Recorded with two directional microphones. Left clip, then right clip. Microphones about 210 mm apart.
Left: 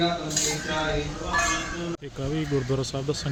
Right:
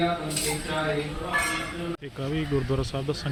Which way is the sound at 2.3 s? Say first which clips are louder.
Left 1 dB; 5° left (ahead or behind).